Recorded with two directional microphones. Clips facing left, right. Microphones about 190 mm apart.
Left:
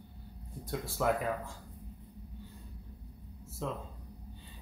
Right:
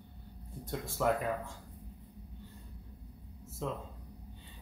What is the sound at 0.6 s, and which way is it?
Speech, centre (ahead or behind).